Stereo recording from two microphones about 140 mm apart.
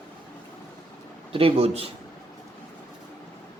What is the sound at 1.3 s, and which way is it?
Speech, 40° right (ahead or behind).